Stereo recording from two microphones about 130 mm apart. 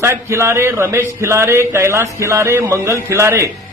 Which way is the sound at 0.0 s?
20° right (ahead or behind).